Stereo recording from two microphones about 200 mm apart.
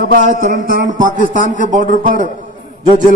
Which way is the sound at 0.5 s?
45° right (ahead or behind).